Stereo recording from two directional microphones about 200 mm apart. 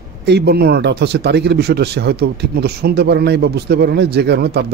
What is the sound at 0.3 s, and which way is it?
Speech, 55° right (ahead or behind).